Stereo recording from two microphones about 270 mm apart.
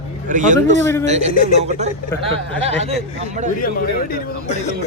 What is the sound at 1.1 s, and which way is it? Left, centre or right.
A man's voice, right.